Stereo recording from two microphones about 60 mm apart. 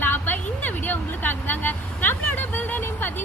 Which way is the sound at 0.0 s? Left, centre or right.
Left.